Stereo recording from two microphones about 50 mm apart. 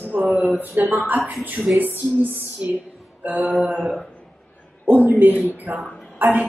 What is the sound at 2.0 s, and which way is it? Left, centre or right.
Speech, right.